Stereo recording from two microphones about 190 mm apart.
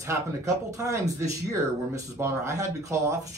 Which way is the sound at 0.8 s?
15° right (ahead or behind).